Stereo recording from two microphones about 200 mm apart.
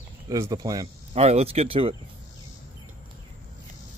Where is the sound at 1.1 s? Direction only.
30° right (ahead or behind).